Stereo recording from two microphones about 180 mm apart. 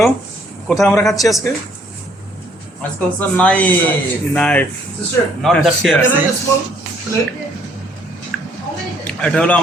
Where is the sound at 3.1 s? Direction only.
5° left (ahead or behind).